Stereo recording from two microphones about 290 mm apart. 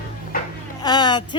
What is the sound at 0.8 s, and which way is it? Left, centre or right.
Speech, centre.